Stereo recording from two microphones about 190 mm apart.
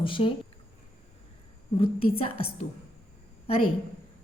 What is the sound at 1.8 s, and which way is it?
Speech, 30° left (ahead or behind).